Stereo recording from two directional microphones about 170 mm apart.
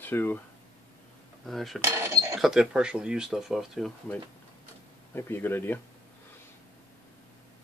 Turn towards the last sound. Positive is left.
turn(degrees=10)  # may be behind; listen again after turning